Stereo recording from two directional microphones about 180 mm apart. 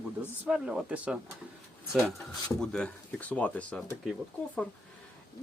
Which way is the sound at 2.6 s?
5° left (ahead or behind).